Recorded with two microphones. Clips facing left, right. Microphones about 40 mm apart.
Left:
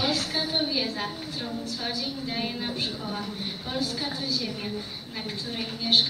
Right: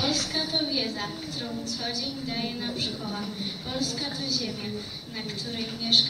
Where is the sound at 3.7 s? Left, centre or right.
Centre.